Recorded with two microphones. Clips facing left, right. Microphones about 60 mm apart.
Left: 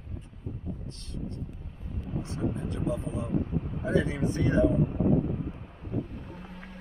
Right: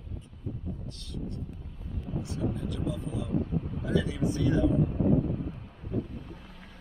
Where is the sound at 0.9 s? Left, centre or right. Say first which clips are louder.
Even; left.